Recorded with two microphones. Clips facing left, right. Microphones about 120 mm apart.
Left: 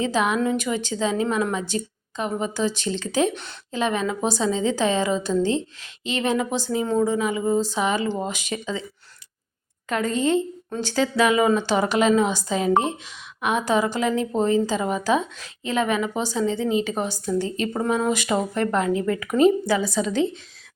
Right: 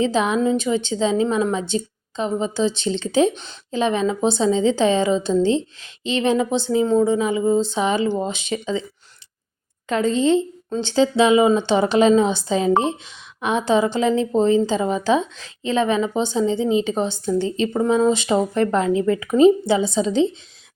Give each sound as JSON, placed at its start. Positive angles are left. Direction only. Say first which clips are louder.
{"t": 0.1, "sound": "a woman's voice", "louder": "right 3 dB", "side_deg": -30}
{"t": 9.9, "sound": "a woman's voice", "louder": "right 4 dB", "side_deg": -25}